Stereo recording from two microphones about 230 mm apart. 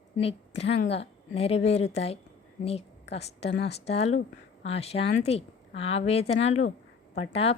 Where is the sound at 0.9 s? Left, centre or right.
Left.